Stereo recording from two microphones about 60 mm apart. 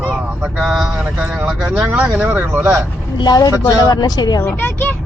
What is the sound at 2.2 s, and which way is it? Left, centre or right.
Speech, right.